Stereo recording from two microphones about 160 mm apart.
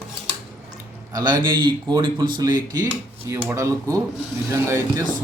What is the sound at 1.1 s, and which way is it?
A man's voice, 25° right (ahead or behind).